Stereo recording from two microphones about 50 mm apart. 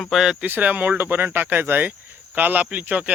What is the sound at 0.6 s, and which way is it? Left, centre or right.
Speech, right.